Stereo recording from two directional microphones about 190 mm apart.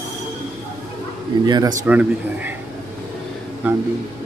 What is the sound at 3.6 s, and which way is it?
Speech, 10° right (ahead or behind).